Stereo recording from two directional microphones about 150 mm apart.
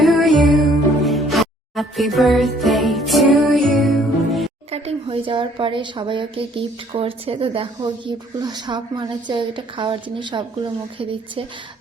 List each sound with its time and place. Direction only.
0.0 s music: centre (ahead or behind)
4.7 s a woman's voice: 40° right (ahead or behind)